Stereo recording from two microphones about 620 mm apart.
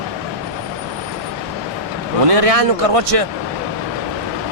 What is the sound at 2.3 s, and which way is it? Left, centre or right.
Speech, right.